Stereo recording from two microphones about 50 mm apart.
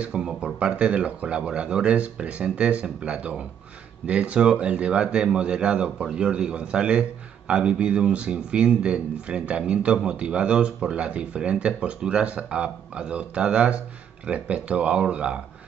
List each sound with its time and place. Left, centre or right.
0.0 s a man's voice: centre